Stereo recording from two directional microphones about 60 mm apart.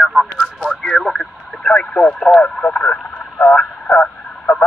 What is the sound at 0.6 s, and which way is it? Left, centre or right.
Speech, centre.